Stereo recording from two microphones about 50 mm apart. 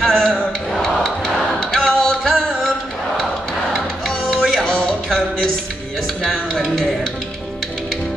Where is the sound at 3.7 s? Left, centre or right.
Centre.